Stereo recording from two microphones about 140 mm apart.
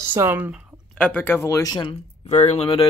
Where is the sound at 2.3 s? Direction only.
50° left (ahead or behind).